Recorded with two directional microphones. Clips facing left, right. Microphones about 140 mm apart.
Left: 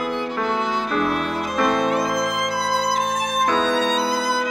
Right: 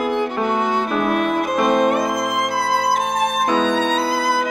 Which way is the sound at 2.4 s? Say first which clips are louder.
Right 3 dB; 50° right (ahead or behind).